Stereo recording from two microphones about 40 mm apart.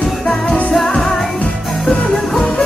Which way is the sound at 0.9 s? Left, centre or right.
Centre.